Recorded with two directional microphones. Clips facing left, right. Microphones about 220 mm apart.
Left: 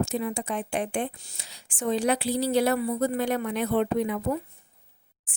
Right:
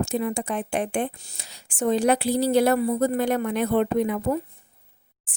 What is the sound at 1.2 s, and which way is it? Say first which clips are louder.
Speech: right 2 dB; 40° right (ahead or behind).